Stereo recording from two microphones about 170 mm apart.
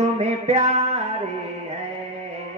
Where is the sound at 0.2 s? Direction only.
40° right (ahead or behind).